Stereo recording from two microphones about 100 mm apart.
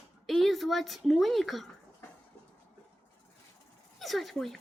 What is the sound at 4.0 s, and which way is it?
Speech, centre (ahead or behind).